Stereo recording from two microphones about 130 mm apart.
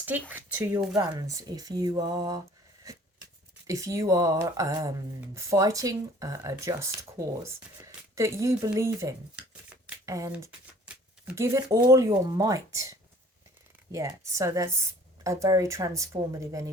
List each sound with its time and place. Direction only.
0.0 s speech: 15° right (ahead or behind)
0.9 s speech: 30° right (ahead or behind)
2.9 s a sound: 25° right (ahead or behind)
3.7 s speech: 25° right (ahead or behind)
9.3 s a sound: 5° right (ahead or behind)
10.1 s speech: 25° right (ahead or behind)
11.3 s speech: 20° right (ahead or behind)